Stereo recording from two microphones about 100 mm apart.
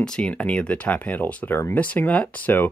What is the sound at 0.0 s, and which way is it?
Speech, 10° left (ahead or behind).